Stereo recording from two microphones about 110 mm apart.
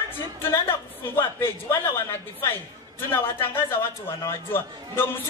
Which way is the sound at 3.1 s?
20° left (ahead or behind).